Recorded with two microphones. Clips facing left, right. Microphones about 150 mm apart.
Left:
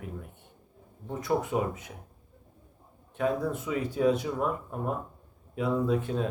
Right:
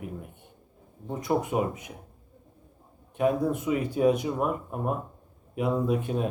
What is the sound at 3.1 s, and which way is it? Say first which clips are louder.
Speech: right 4 dB; 15° right (ahead or behind).